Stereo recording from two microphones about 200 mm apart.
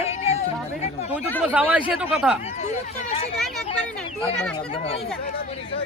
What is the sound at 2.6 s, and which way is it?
Speech, 35° left (ahead or behind).